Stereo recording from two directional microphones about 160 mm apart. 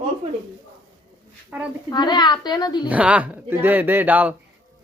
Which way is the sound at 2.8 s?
10° right (ahead or behind).